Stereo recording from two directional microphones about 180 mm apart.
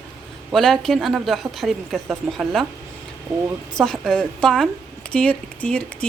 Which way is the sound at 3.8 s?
5° left (ahead or behind).